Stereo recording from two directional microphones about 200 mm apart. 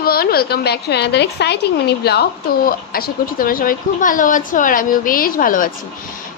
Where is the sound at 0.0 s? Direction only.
50° left (ahead or behind).